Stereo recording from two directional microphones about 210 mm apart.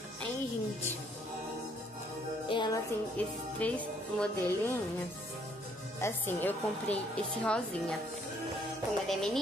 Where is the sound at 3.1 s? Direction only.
5° left (ahead or behind).